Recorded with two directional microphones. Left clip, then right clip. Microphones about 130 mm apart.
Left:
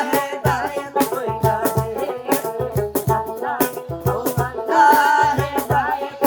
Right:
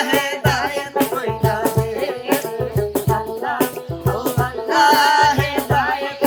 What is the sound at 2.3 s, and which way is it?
Music, 45° left (ahead or behind).